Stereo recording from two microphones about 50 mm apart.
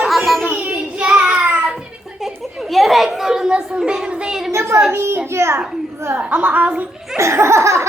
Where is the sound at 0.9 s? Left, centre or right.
Right.